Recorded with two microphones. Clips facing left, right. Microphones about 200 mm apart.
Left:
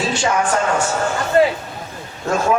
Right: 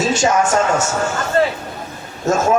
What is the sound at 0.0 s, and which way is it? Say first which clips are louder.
Speech: right 3 dB; 45° right (ahead or behind).